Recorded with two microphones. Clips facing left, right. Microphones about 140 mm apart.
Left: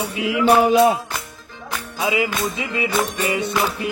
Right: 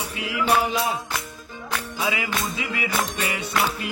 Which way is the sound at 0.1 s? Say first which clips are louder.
Left 6 dB; 25° left (ahead or behind).